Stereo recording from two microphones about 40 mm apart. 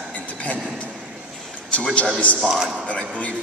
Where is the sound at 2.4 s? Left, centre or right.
Centre.